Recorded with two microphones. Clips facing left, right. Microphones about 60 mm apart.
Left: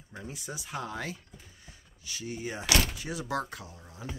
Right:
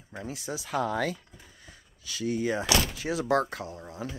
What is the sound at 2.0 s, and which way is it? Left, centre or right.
Speech, right.